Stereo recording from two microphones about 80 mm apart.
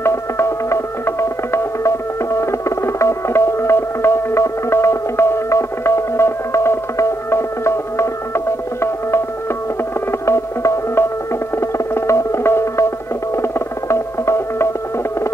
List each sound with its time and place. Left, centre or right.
0.0 s music: left
10.2 s music: left